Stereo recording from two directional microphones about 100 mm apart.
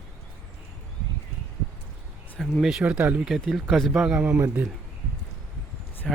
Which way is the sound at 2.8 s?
15° right (ahead or behind).